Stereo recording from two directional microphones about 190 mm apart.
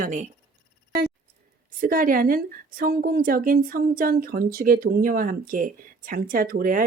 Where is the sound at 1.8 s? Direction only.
45° right (ahead or behind).